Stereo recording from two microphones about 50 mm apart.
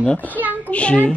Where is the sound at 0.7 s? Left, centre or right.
Left.